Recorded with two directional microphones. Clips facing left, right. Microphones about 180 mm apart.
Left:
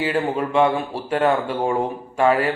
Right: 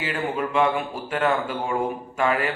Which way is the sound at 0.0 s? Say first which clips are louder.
Left 5 dB; 35° left (ahead or behind).